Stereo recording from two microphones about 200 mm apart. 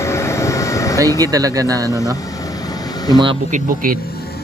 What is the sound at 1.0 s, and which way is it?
Speech, 20° right (ahead or behind).